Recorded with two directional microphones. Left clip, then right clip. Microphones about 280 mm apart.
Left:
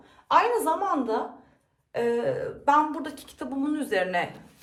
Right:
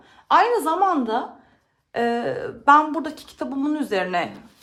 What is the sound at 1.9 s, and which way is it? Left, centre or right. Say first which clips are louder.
A woman's voice: right 3 dB; right.